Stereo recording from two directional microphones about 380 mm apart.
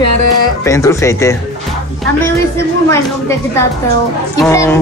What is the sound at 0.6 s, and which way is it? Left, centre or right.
Speech, centre.